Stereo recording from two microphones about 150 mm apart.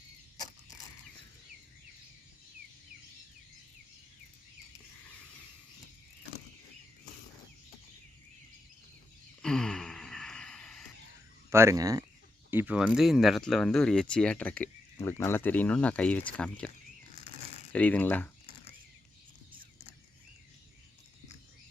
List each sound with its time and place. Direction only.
9.4 s a sound: 5° left (ahead or behind)
11.5 s speech: 20° right (ahead or behind)
12.5 s speech: 10° right (ahead or behind); by 18.3 s 10° left (ahead or behind)